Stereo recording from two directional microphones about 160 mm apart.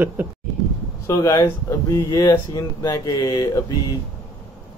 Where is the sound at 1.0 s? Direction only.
20° left (ahead or behind).